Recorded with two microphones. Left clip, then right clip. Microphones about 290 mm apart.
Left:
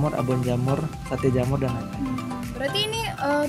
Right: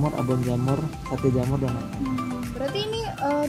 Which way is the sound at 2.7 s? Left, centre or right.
Left.